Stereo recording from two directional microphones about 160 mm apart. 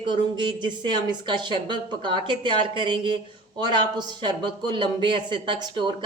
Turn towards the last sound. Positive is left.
turn(degrees=-30)  # may be behind; listen again after turning